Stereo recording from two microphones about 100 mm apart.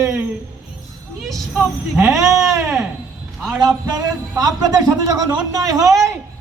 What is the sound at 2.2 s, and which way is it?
Speech, 30° right (ahead or behind).